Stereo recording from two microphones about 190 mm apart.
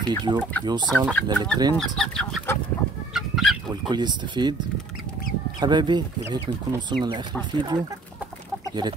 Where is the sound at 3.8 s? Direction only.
25° right (ahead or behind).